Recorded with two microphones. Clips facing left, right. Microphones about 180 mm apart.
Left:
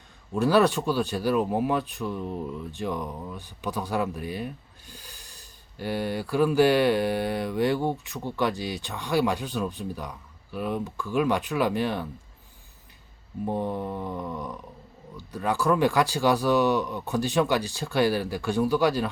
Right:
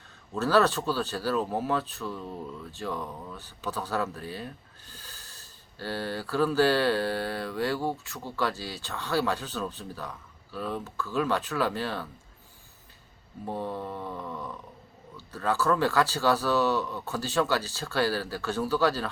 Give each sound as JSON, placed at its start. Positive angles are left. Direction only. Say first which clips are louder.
{"t": 0.3, "sound": "speech", "louder": "left 3 dB", "side_deg": 15}
{"t": 13.4, "sound": "speech", "louder": "left 5 dB", "side_deg": 20}